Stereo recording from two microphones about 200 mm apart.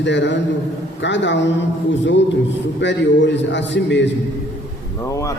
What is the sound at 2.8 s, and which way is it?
A man's voice, 65° left (ahead or behind).